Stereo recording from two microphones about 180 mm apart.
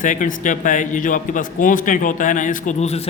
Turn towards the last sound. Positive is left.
turn(degrees=35)  # may be behind; listen again after turning